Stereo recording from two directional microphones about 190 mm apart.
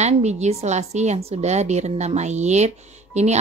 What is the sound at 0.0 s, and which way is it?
Speech, 35° right (ahead or behind).